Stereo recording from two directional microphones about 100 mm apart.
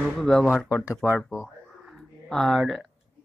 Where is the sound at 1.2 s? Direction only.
5° right (ahead or behind).